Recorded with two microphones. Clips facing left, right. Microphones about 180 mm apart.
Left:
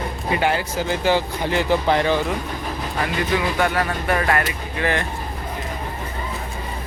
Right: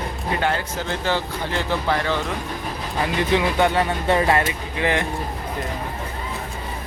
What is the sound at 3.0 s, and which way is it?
Speech, 20° right (ahead or behind).